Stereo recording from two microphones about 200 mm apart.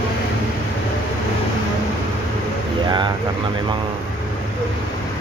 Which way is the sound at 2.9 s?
20° right (ahead or behind).